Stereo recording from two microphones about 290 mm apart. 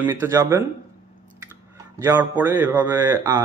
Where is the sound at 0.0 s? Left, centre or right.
Centre.